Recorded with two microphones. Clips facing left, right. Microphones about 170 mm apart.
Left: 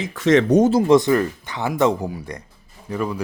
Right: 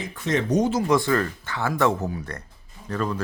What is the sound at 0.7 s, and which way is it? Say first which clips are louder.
Speech: left 6 dB; 25° left (ahead or behind).